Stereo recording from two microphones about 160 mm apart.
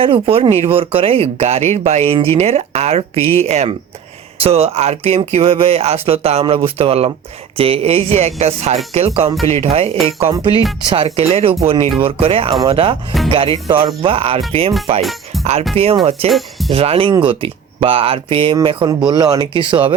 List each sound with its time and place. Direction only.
0.0 s speech: 35° right (ahead or behind)
15.7 s speech: 35° right (ahead or behind)
16.3 s speech: centre (ahead or behind)
16.7 s speech: 35° right (ahead or behind)